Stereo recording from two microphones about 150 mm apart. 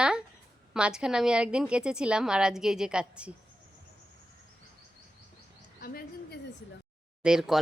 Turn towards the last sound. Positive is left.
turn(degrees=-5)  # may be behind; listen again after turning